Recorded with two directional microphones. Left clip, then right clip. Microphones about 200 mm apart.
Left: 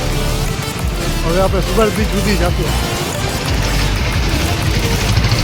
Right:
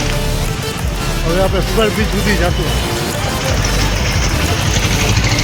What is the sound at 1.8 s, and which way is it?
Speech, 15° left (ahead or behind).